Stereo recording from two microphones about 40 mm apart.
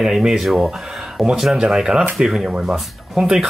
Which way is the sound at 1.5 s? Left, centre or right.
Centre.